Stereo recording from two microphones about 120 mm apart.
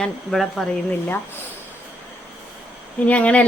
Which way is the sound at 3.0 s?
10° left (ahead or behind).